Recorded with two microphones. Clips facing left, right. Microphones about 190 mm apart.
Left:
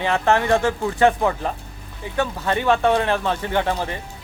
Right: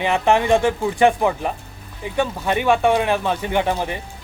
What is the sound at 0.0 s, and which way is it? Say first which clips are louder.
Speech: right 2 dB; 15° right (ahead or behind).